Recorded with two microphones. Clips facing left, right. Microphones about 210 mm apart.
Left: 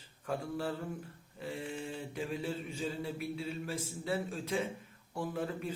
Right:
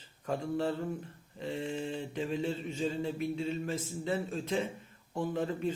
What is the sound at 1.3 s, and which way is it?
Mantra, 10° left (ahead or behind).